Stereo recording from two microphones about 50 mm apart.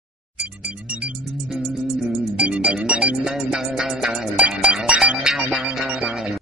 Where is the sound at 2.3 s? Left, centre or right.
Right.